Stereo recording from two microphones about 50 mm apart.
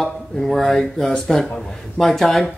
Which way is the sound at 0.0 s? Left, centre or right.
Centre.